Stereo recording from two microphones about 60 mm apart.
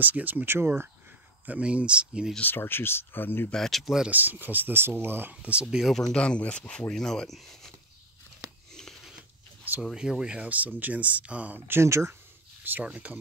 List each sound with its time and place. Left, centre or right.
0.0 s speech: right
1.4 s speech: right
2.4 s speech: left
3.5 s speech: centre
3.8 s speech: centre
4.1 s speech: right
5.3 s speech: centre
6.1 s speech: centre
9.9 s speech: centre
11.6 s speech: right
11.9 s speech: right
12.8 s speech: right